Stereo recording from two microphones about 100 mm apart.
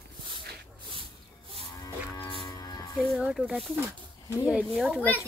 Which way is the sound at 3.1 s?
10° right (ahead or behind).